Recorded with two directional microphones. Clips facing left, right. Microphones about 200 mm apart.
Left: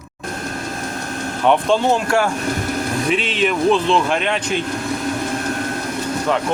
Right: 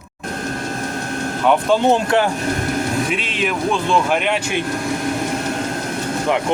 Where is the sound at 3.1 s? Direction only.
Centre (ahead or behind).